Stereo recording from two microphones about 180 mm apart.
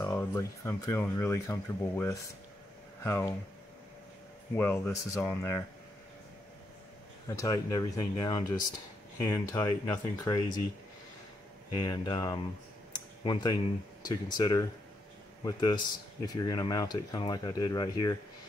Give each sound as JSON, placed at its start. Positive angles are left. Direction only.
{"t": 0.0, "sound": "speech", "side_deg": 20}
{"t": 4.6, "sound": "speech", "side_deg": 10}
{"t": 7.2, "sound": "speech", "side_deg": 20}
{"t": 11.7, "sound": "speech", "side_deg": 20}
{"t": 12.9, "sound": "a sound", "side_deg": 25}
{"t": 14.0, "sound": "speech", "side_deg": 20}